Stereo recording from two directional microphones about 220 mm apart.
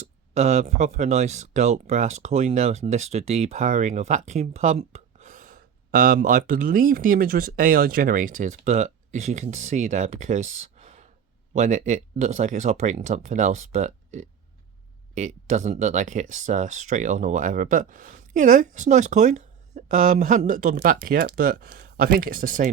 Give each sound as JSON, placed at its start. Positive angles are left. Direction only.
{"t": 0.3, "sound": "speech", "side_deg": -30}